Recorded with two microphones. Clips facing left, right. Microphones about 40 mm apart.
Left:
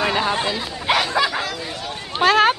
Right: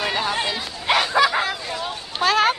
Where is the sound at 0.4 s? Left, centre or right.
Centre.